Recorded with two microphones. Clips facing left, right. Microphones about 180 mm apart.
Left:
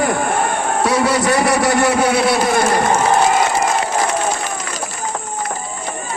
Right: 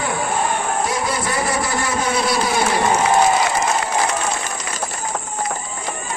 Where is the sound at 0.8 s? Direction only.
70° left (ahead or behind).